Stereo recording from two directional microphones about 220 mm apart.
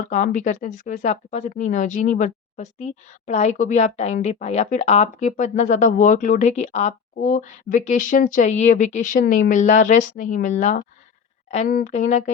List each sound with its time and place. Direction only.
0.1 s speech: 35° left (ahead or behind)